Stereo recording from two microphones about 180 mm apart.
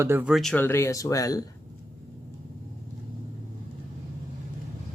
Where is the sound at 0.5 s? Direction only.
10° left (ahead or behind).